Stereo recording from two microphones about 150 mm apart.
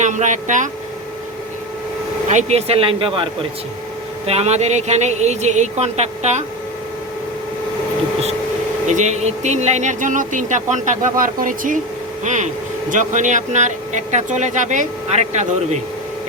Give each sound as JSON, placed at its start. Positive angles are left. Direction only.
{"t": 0.0, "sound": "speech", "side_deg": -55}
{"t": 2.3, "sound": "speech", "side_deg": -45}
{"t": 4.3, "sound": "speech", "side_deg": -45}
{"t": 8.9, "sound": "speech", "side_deg": -50}